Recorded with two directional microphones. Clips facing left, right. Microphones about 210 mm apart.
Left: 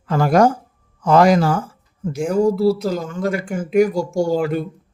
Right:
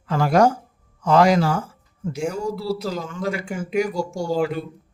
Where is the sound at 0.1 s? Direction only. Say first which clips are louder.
Left 3 dB; 45° left (ahead or behind).